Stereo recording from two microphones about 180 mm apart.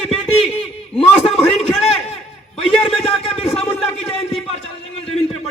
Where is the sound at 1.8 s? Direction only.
35° left (ahead or behind).